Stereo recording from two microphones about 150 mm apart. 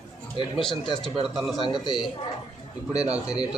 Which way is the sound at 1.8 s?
30° left (ahead or behind).